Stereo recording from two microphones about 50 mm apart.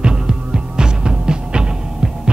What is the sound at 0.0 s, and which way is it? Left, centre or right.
Music, centre.